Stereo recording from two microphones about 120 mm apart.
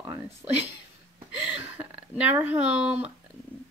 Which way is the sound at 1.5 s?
10° right (ahead or behind).